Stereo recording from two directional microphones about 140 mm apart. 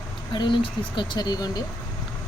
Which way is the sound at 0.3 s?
35° left (ahead or behind).